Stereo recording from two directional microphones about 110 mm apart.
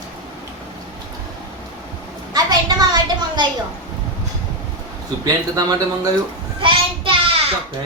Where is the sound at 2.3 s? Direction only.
35° right (ahead or behind).